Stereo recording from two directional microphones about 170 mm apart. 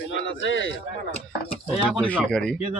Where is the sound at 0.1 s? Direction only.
90° left.